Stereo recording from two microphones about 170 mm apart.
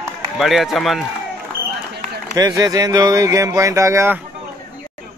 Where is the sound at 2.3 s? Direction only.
20° right (ahead or behind).